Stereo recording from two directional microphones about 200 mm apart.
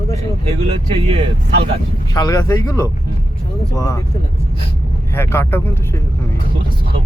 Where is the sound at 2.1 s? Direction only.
20° left (ahead or behind).